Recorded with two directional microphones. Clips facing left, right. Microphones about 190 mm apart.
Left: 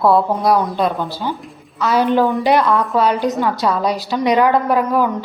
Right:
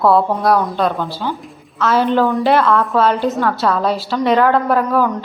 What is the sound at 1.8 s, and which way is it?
A woman's voice, 10° left (ahead or behind).